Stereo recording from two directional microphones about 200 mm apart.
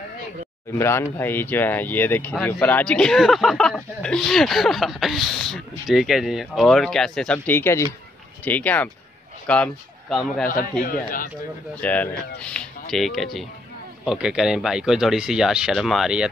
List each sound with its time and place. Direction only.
0.7 s speech: 10° left (ahead or behind)
10.8 s speech: 45° left (ahead or behind)
11.8 s speech: 10° left (ahead or behind)